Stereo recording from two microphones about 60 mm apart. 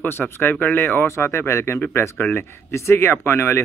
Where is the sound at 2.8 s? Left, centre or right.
Left.